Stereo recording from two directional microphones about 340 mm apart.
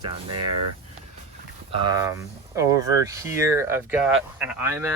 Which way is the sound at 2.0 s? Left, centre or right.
Centre.